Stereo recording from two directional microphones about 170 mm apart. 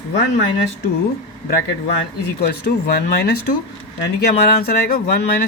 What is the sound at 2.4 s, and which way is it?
Speech, 65° left (ahead or behind).